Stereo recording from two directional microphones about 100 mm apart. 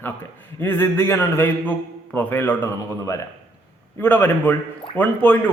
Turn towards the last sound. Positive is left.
turn(degrees=15)  # may be behind; listen again after turning